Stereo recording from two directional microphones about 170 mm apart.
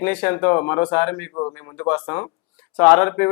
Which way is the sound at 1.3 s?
25° left (ahead or behind).